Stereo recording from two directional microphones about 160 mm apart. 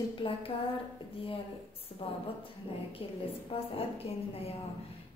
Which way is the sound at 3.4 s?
35° left (ahead or behind).